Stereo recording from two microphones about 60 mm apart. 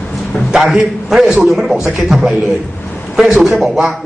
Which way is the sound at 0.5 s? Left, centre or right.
Centre.